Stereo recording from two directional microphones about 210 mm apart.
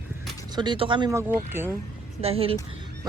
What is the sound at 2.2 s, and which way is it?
Speech, 25° right (ahead or behind).